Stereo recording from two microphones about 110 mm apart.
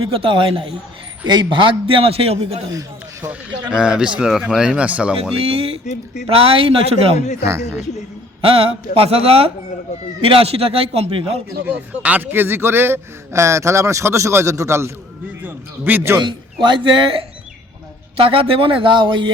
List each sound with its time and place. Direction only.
0.1 s a man's voice: 55° right (ahead or behind); by 2.6 s 70° right (ahead or behind)
2.6 s a sound: 30° right (ahead or behind)
3.2 s speech: 10° right (ahead or behind)
5.4 s a man's voice: 60° right (ahead or behind)
5.8 s speech: 90° left
6.2 s a man's voice: 60° right (ahead or behind)
7.4 s a man's voice: 25° right (ahead or behind)
8.4 s a man's voice: 60° right (ahead or behind)
11.6 s a man's voice: 15° right (ahead or behind)
16.2 s speech: 45° right (ahead or behind)